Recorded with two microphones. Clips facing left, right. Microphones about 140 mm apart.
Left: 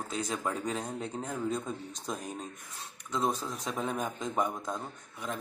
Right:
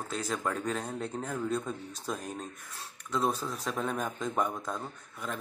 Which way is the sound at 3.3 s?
10° left (ahead or behind).